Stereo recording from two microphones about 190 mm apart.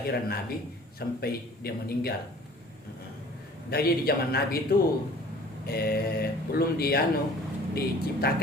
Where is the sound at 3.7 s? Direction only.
55° left (ahead or behind).